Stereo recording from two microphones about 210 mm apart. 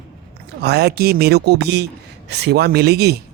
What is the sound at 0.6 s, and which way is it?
Speech, 50° right (ahead or behind).